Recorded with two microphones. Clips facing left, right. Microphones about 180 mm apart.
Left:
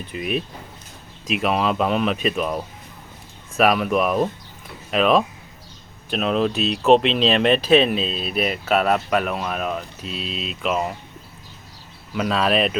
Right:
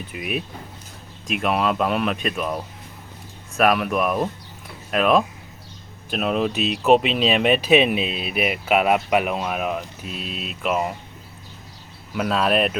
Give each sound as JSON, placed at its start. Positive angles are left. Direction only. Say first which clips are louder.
{"t": 0.1, "sound": "speech", "louder": "left 4 dB", "side_deg": -5}
{"t": 3.6, "sound": "speech", "louder": "left 1 dB", "side_deg": 0}
{"t": 10.0, "sound": "speech", "louder": "left 2 dB", "side_deg": -55}
{"t": 10.6, "sound": "speech", "louder": "even", "side_deg": -5}
{"t": 12.1, "sound": "speech", "louder": "even", "side_deg": 0}